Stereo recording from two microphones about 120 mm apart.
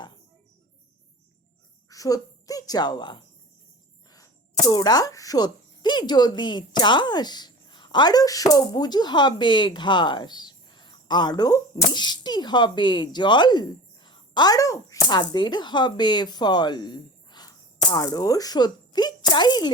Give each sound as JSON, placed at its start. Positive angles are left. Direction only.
{"t": 1.9, "sound": "a woman's voice", "side_deg": 30}
{"t": 4.7, "sound": "a woman's voice", "side_deg": 35}